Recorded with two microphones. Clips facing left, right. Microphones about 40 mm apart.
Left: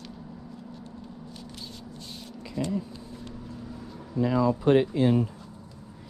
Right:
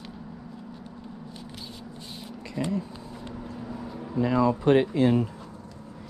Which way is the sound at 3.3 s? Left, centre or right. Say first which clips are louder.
Right 6 dB; right.